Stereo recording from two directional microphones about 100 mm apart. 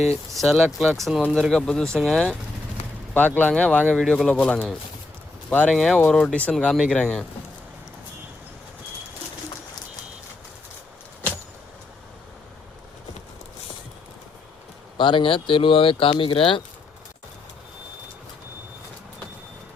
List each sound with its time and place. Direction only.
0.3 s speech: centre (ahead or behind)
3.2 s speech: 15° left (ahead or behind)
5.7 s speech: 5° left (ahead or behind)
14.9 s speech: 55° left (ahead or behind)